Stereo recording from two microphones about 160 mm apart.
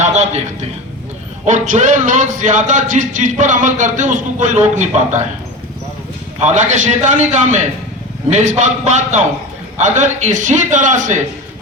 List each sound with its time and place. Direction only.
0.0 s a sound: 45° right (ahead or behind)
1.5 s a man's voice: 50° right (ahead or behind)
6.4 s a man's voice: 50° right (ahead or behind)